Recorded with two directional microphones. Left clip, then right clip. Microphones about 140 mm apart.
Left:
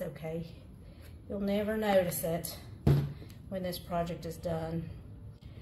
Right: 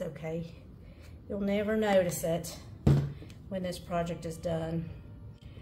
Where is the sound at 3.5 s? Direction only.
45° right (ahead or behind).